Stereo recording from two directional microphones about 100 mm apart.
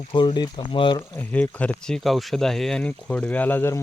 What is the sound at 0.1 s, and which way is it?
Speech, 50° left (ahead or behind).